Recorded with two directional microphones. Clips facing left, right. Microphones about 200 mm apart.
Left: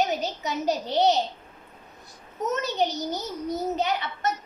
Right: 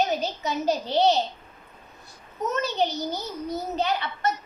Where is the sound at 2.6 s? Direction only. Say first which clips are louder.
Even; 20° left (ahead or behind).